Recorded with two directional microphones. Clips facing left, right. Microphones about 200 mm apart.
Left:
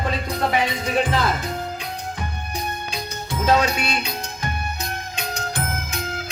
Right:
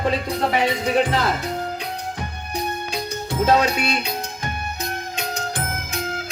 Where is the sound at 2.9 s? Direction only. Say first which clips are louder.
Right 3 dB; 40° right (ahead or behind).